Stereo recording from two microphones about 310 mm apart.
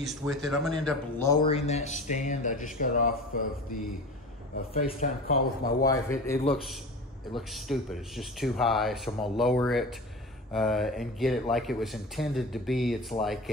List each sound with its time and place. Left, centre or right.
0.0 s speech: centre
1.4 s speech: centre
4.6 s speech: left
5.9 s speech: centre